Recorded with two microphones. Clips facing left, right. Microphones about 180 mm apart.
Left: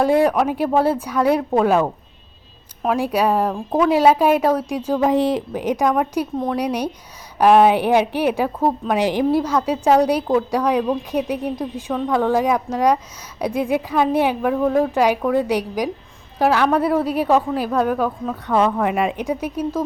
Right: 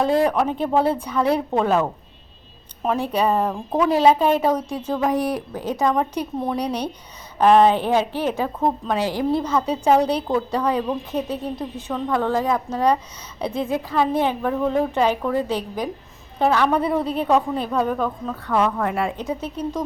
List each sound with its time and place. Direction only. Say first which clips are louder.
0.0 s a woman's voice: left 3 dB; 5° left (ahead or behind)
5.0 s speech: left 4 dB; 25° left (ahead or behind)
5.8 s a woman's voice: left 1 dB; 5° left (ahead or behind)
9.0 s a woman's voice: left 6 dB; 15° left (ahead or behind)
11.9 s a woman's voice: left 3 dB; 5° left (ahead or behind)
18.4 s a woman's voice: left 3 dB; 20° left (ahead or behind)